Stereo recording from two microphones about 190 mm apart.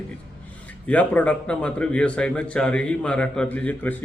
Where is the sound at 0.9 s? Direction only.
5° left (ahead or behind).